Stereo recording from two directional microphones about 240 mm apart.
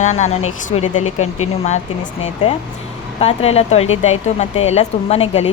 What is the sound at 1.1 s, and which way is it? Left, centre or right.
Speech, left.